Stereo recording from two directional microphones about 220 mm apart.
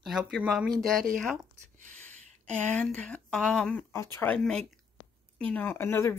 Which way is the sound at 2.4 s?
5° left (ahead or behind).